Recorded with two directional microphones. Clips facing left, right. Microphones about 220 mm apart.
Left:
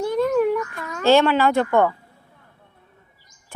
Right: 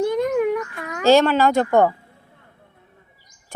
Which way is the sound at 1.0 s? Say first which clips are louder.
Right 1 dB; 40° right (ahead or behind).